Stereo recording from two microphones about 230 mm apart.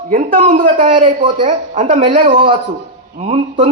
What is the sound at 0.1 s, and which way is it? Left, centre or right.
A man's voice, right.